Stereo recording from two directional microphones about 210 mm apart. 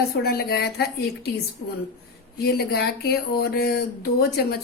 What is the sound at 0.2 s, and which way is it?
Speech, 45° left (ahead or behind).